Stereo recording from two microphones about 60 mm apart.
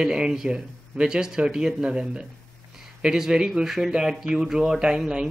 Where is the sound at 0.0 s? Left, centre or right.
Centre.